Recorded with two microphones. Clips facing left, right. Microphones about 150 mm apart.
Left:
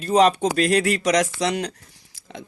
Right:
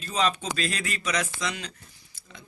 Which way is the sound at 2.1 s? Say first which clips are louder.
Left 12 dB; 90° left.